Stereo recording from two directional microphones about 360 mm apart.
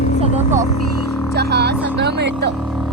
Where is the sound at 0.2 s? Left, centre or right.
Centre.